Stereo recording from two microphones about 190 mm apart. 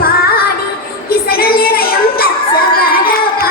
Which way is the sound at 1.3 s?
50° left (ahead or behind).